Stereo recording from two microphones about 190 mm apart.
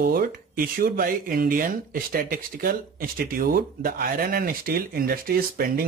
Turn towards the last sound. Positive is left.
turn(degrees=-50)  # may be behind; listen again after turning